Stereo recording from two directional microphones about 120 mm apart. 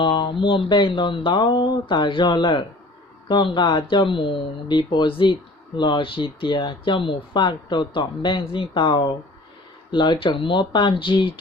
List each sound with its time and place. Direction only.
0.0 s speech: 45° left (ahead or behind)